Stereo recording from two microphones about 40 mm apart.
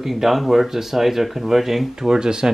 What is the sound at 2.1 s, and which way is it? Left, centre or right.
Speech, centre.